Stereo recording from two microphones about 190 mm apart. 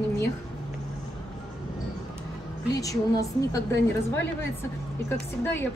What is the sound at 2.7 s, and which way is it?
Speech, 15° left (ahead or behind).